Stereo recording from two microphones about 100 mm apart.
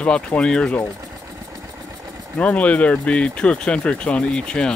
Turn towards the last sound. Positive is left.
turn(degrees=10)  # may be behind; listen again after turning